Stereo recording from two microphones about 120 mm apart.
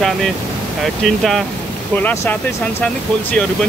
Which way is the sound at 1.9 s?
20° left (ahead or behind).